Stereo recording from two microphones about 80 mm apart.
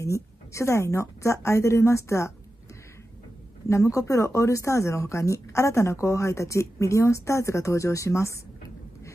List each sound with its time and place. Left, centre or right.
0.0 s speech: left
3.6 s speech: left